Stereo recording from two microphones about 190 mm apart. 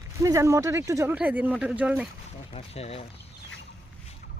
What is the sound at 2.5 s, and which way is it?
Speech, 30° left (ahead or behind).